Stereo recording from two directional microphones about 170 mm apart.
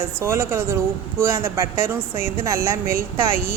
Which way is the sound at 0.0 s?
15° right (ahead or behind).